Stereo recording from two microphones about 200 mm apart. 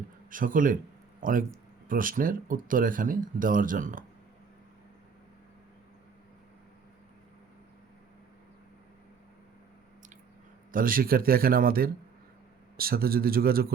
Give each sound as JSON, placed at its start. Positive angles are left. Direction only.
{"t": 0.3, "sound": "speech", "side_deg": -45}
{"t": 10.7, "sound": "speech", "side_deg": -45}